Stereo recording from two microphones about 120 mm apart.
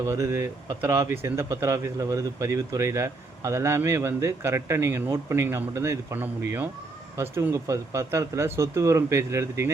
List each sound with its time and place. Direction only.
0.0 s speech: 25° right (ahead or behind)